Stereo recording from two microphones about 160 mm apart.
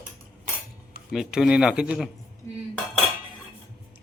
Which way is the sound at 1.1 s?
5° right (ahead or behind).